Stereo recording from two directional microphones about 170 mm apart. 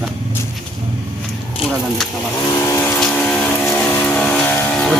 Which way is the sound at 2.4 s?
20° left (ahead or behind).